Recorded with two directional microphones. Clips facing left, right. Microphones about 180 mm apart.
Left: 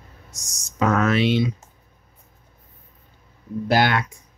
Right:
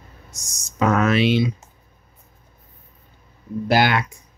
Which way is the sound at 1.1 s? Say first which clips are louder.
Right 1 dB; 90° right.